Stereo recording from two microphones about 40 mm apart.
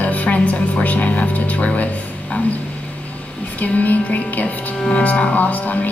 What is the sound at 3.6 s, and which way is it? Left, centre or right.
A woman's voice, left.